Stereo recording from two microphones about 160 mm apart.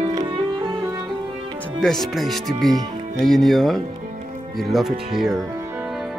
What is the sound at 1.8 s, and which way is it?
Speech, centre (ahead or behind).